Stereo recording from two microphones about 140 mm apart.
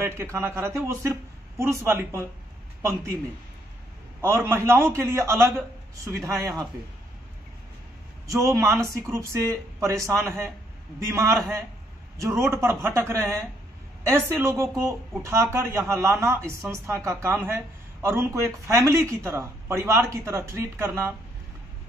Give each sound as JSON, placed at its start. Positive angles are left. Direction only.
{"t": 0.0, "sound": "speech", "side_deg": -20}
{"t": 4.2, "sound": "a man's voice", "side_deg": -20}
{"t": 8.3, "sound": "speech", "side_deg": -25}